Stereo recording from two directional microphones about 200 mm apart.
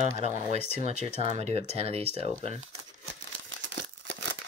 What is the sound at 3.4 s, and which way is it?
Crumpling, 65° right (ahead or behind).